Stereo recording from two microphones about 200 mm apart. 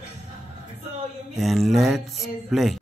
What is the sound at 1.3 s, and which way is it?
Speech, centre (ahead or behind).